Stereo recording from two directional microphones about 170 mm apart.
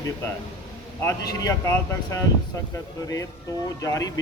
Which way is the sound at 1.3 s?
20° left (ahead or behind).